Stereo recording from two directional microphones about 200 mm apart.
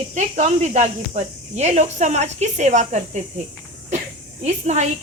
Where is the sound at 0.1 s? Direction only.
35° right (ahead or behind).